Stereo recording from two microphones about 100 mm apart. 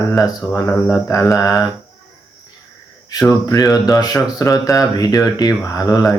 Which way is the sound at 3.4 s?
35° left (ahead or behind).